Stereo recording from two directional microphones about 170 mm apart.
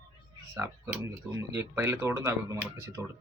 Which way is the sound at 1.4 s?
15° right (ahead or behind).